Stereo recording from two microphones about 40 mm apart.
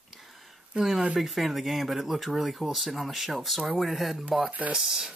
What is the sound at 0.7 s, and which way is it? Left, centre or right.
Speech, right.